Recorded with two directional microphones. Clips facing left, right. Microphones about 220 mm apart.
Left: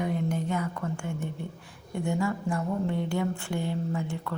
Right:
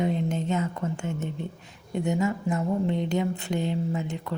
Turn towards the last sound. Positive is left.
turn(degrees=-20)  # may be behind; listen again after turning